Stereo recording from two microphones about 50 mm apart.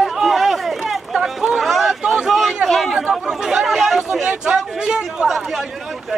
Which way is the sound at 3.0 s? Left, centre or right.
Centre.